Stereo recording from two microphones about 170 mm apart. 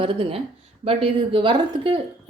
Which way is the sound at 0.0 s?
30° right (ahead or behind).